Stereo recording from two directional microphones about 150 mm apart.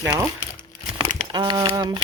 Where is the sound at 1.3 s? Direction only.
30° right (ahead or behind).